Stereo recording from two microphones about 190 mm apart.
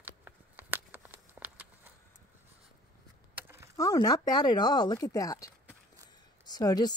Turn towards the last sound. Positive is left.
turn(degrees=20)  # may be behind; listen again after turning